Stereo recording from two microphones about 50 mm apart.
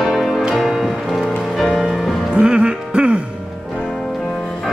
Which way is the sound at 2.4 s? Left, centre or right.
Right.